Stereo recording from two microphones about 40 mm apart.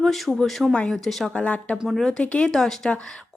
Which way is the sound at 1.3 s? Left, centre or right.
Left.